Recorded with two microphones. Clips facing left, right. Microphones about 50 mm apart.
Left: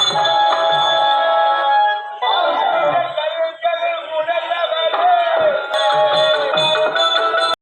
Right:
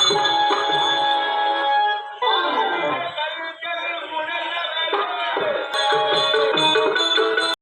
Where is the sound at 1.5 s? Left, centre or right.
Centre.